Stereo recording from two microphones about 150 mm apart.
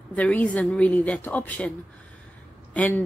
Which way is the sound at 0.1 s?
10° left (ahead or behind).